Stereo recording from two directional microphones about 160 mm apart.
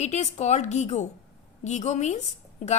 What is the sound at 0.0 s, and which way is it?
A woman's voice, 45° left (ahead or behind).